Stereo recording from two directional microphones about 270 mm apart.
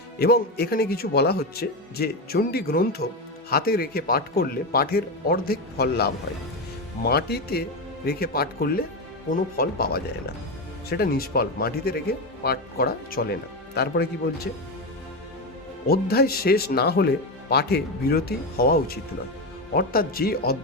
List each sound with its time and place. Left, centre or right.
0.2 s speech: left
15.9 s speech: left